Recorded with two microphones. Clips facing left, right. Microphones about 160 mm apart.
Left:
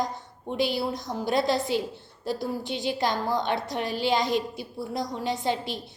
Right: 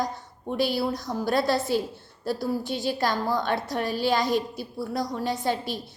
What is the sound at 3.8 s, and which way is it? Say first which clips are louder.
Speech: right 2 dB; 45° right (ahead or behind).